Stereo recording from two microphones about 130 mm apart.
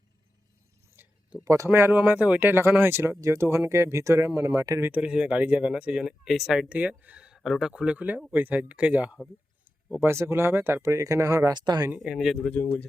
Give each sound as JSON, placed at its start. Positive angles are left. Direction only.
{"t": 0.9, "sound": "speech", "side_deg": -20}
{"t": 4.9, "sound": "speech", "side_deg": -10}
{"t": 11.9, "sound": "speech", "side_deg": -5}